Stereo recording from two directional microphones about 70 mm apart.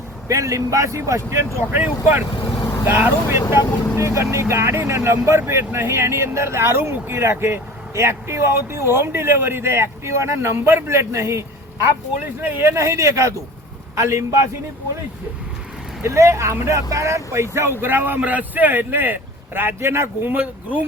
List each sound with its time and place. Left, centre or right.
0.3 s speech: right
1.5 s speech: right
12.4 s speech: right
16.0 s speech: right
20.3 s speech: right